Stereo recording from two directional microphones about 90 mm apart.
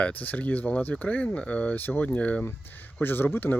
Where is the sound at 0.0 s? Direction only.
15° left (ahead or behind).